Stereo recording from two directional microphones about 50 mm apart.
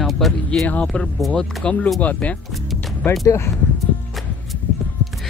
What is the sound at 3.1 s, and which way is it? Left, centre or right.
Speech, left.